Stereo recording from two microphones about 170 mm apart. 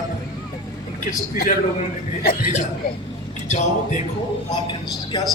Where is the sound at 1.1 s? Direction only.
55° left (ahead or behind).